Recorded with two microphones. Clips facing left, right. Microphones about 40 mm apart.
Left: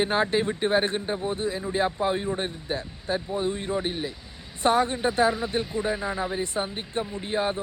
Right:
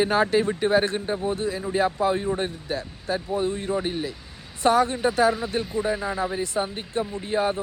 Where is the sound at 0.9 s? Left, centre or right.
Centre.